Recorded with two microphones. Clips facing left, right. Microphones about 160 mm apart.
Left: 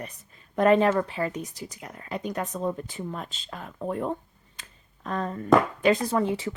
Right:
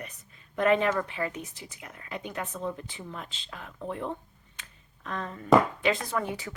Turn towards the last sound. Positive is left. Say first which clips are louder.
# left 7 dB
turn(degrees=25)  # may be behind; listen again after turning